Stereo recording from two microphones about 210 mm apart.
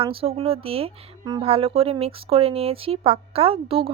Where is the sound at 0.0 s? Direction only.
25° right (ahead or behind).